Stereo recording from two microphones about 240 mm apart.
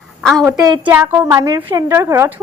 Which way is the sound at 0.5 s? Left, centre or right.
Centre.